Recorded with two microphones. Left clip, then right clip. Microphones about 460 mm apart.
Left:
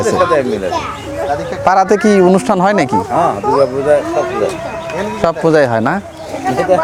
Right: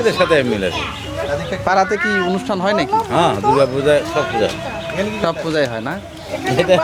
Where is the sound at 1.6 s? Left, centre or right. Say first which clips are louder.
Left 6 dB; left.